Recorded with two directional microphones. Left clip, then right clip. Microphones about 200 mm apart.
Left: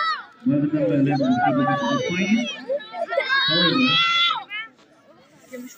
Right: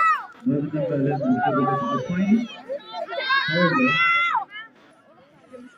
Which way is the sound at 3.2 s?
20° right (ahead or behind).